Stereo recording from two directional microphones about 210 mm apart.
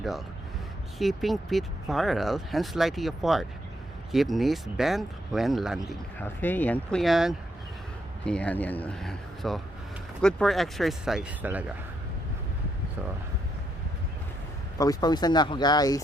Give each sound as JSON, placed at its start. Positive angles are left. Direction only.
{"t": 0.9, "sound": "speech", "side_deg": 0}
{"t": 14.8, "sound": "speech", "side_deg": 20}